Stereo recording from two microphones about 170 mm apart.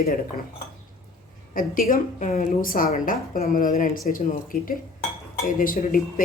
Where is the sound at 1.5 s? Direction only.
55° left (ahead or behind).